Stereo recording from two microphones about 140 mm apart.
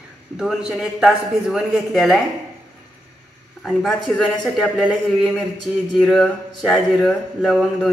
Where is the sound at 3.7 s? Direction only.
Centre (ahead or behind).